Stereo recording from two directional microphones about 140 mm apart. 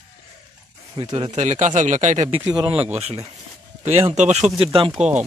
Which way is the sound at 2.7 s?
10° right (ahead or behind).